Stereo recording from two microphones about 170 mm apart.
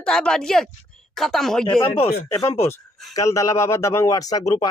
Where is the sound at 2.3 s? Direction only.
15° left (ahead or behind).